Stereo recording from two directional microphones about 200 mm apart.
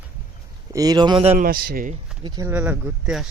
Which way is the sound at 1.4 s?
50° right (ahead or behind).